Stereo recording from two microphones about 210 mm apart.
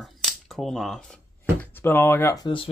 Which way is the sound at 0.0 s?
Centre (ahead or behind).